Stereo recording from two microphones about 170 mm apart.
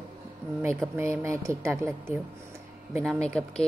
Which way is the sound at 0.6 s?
15° right (ahead or behind).